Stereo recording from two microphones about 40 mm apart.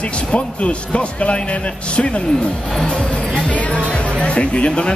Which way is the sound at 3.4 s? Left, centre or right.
Left.